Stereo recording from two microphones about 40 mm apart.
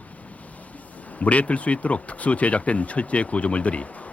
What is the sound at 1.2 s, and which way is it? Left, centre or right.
Speech, left.